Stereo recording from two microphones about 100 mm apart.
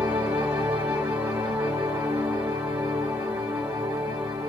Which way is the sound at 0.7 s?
20° right (ahead or behind).